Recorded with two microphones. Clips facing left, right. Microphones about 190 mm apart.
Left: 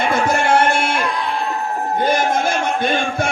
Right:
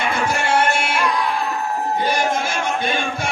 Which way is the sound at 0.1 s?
50° left (ahead or behind).